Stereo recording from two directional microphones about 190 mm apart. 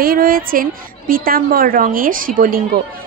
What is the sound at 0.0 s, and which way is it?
Speech, 50° right (ahead or behind).